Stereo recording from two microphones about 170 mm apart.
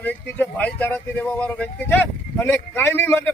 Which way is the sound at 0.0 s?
10° left (ahead or behind).